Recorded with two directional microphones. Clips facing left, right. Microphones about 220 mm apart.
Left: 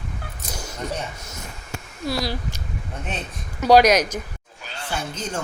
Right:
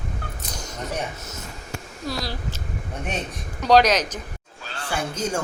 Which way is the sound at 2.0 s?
10° left (ahead or behind).